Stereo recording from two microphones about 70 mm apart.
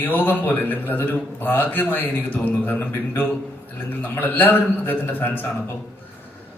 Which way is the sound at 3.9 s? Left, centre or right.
Left.